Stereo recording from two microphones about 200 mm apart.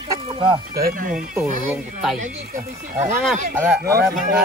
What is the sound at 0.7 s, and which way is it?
Speech, 50° right (ahead or behind).